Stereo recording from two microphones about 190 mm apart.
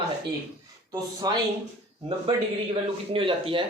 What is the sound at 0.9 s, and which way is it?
Speech, 20° right (ahead or behind).